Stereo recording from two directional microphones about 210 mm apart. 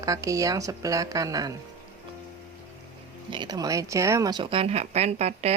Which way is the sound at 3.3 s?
20° right (ahead or behind).